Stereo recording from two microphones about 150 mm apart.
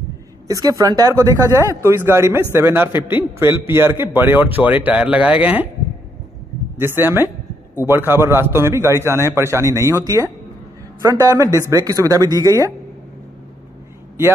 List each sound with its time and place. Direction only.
0.5 s a man's voice: 25° right (ahead or behind)
6.8 s a man's voice: 15° right (ahead or behind)